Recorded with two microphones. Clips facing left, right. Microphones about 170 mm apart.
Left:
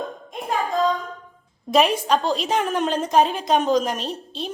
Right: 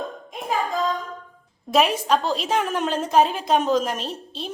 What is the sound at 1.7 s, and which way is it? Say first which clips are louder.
A woman's voice: left 1 dB; 5° right (ahead or behind).